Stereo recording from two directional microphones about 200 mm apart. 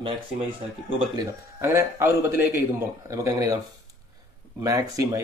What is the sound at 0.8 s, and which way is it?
Speech, 25° right (ahead or behind).